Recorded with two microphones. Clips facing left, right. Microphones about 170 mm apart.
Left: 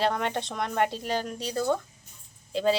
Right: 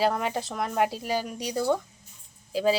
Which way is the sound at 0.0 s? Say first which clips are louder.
Right 1 dB; 5° right (ahead or behind).